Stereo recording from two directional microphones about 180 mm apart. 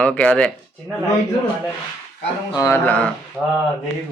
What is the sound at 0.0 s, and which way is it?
Speech, 5° left (ahead or behind).